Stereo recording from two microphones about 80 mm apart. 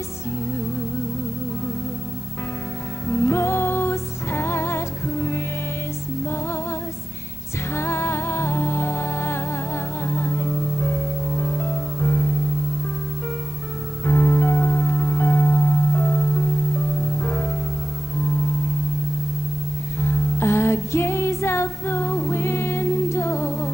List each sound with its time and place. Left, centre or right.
3.1 s music: left
7.7 s music: left
14.0 s music: left
20.0 s music: left